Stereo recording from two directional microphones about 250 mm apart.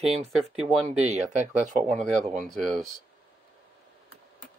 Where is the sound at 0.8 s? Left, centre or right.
Right.